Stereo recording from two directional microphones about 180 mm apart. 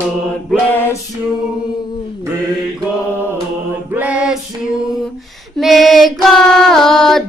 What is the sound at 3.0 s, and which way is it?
Mantra, 10° right (ahead or behind).